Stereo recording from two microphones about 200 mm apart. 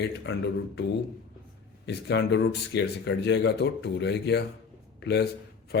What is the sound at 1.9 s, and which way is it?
Speech, 60° left (ahead or behind).